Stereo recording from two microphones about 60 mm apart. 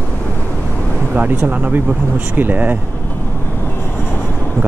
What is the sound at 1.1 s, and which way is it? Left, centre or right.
Speech, right.